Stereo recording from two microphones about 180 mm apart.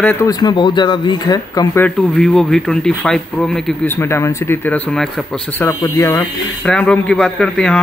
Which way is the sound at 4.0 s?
15° left (ahead or behind).